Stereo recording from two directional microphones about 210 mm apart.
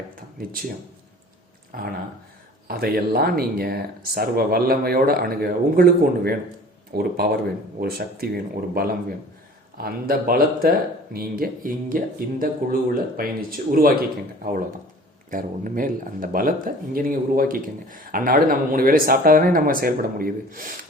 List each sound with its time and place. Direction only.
0.2 s speech: 45° right (ahead or behind)
1.7 s speech: 45° right (ahead or behind)
15.3 s speech: 40° right (ahead or behind)